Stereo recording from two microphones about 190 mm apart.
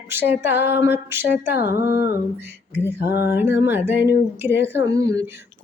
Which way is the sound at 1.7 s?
55° left (ahead or behind).